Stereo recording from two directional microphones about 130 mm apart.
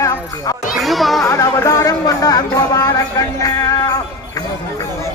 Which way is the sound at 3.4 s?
25° left (ahead or behind).